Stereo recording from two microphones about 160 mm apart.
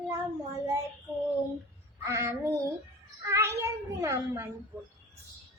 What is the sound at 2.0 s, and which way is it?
Child singing, 20° right (ahead or behind).